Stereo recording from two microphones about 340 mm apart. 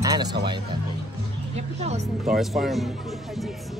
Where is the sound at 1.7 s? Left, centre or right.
Centre.